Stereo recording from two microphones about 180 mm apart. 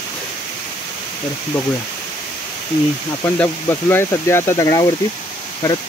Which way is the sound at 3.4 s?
15° left (ahead or behind).